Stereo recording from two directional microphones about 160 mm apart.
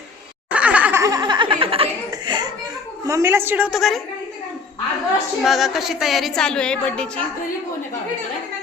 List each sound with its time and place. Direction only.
0.5 s laughter: 10° right (ahead or behind); by 1.9 s 35° right (ahead or behind)
2.0 s a sound: 25° right (ahead or behind)
3.1 s a woman's voice: 15° right (ahead or behind); by 4.0 s centre (ahead or behind)
5.4 s a woman's voice: centre (ahead or behind)